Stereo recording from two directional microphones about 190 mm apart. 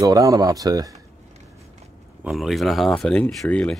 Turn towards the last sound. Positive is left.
turn(degrees=5)  # may be behind; listen again after turning